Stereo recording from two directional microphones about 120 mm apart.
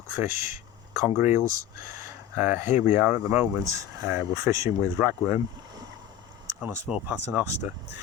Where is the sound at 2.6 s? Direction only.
80° left.